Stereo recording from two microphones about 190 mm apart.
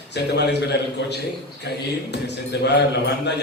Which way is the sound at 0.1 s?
60° left (ahead or behind).